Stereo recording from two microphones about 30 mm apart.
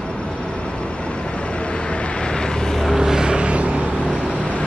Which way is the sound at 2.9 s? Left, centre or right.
Centre.